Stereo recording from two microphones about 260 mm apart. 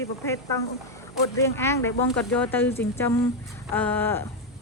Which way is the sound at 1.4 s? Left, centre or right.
Centre.